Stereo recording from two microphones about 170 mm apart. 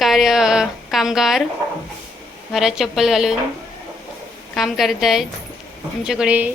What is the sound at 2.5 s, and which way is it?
Speech, centre (ahead or behind).